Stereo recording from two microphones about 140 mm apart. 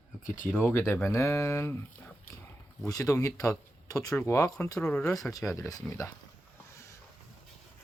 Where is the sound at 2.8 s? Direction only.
25° left (ahead or behind).